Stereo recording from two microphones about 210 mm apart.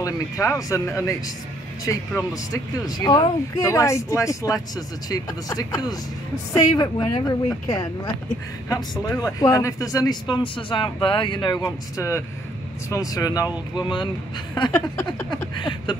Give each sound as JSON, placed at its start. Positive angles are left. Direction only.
{"t": 0.0, "sound": "speech", "side_deg": 15}
{"t": 9.0, "sound": "speech", "side_deg": 15}
{"t": 14.5, "sound": "speech", "side_deg": 15}
{"t": 15.2, "sound": "speech", "side_deg": 20}